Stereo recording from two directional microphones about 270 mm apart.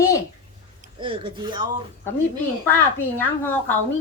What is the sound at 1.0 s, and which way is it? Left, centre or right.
Speech, centre.